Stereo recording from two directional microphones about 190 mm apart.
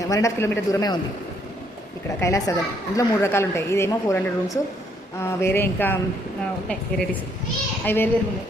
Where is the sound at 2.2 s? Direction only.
15° left (ahead or behind).